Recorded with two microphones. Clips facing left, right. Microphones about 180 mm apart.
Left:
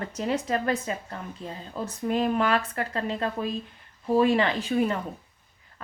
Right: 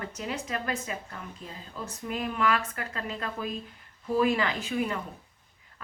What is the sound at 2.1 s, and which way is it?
Speech, 30° left (ahead or behind).